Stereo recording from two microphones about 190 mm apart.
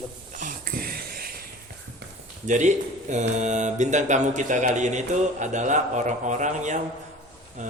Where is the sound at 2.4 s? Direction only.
40° right (ahead or behind).